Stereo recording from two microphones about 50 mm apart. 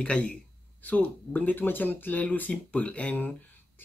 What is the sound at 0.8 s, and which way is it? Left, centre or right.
Speech, left.